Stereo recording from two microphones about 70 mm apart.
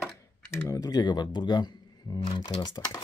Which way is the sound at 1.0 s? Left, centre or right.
Left.